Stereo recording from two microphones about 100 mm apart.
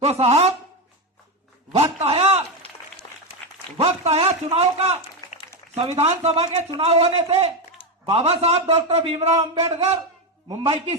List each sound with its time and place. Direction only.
0.0 s a man's voice: 90° right
1.7 s a sound: 90° right
3.0 s applause: 50° left (ahead or behind)
3.8 s a man's voice: 90° right
6.0 s a man's voice: 90° right
10.6 s a man's voice: 75° right (ahead or behind)